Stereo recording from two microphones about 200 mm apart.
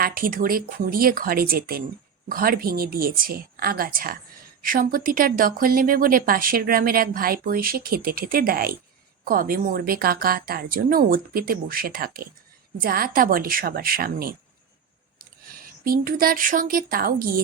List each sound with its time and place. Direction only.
0.0 s speech: 45° right (ahead or behind)
15.8 s speech: 45° right (ahead or behind)